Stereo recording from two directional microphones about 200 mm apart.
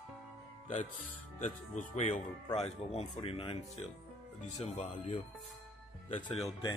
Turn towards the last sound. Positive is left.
turn(degrees=30)  # may be behind; listen again after turning